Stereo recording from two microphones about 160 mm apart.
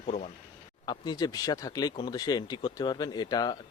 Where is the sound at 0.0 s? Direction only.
45° left (ahead or behind).